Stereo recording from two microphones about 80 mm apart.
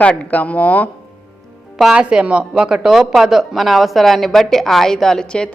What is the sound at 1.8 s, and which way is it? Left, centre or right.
Speech, centre.